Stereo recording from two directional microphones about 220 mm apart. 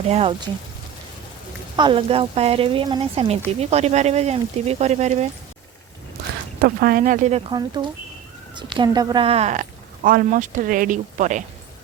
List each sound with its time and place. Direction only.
0.1 s speech: 25° right (ahead or behind)
1.7 s speech: 20° right (ahead or behind)
6.6 s a woman's voice: 40° right (ahead or behind)
7.5 s a woman's voice: 20° right (ahead or behind); by 11.4 s 35° right (ahead or behind)